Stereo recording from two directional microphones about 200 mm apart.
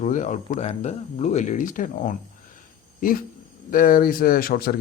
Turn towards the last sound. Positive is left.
turn(degrees=50)  # may be behind; listen again after turning